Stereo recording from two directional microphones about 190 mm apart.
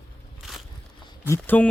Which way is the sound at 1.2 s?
10° left (ahead or behind).